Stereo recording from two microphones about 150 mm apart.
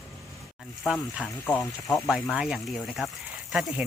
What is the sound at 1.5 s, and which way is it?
Speech, 10° left (ahead or behind).